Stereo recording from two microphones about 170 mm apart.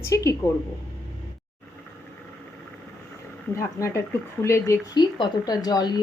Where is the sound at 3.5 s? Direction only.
15° left (ahead or behind).